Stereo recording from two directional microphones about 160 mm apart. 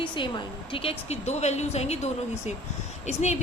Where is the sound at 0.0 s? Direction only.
30° left (ahead or behind).